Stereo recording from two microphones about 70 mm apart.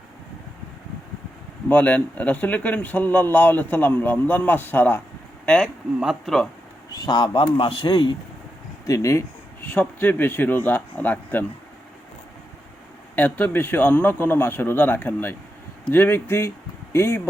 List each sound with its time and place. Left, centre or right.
1.7 s speech: left
5.6 s speech: centre
6.9 s a man's voice: left
8.9 s speech: left
9.6 s speech: left
13.1 s speech: left